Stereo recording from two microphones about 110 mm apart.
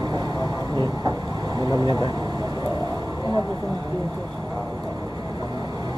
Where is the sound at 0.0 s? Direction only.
40° right (ahead or behind).